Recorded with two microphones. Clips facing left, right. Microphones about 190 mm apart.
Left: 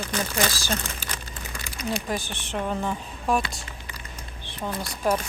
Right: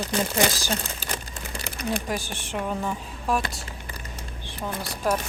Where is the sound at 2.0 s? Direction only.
10° right (ahead or behind).